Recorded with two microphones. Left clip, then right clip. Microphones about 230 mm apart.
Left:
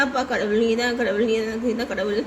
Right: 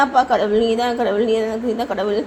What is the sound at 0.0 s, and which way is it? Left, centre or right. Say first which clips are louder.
A woman's voice: right 7 dB; centre.